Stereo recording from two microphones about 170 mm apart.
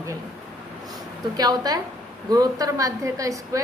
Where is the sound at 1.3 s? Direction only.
25° right (ahead or behind).